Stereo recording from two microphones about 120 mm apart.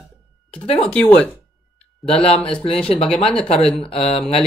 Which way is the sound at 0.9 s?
10° left (ahead or behind).